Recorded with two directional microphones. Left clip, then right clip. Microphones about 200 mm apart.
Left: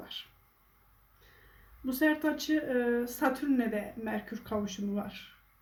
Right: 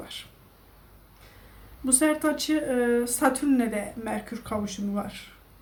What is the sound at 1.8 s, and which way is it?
Speech, 5° right (ahead or behind).